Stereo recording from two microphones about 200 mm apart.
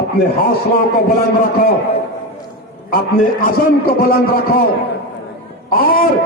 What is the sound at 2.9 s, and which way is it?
A man's voice, 45° left (ahead or behind).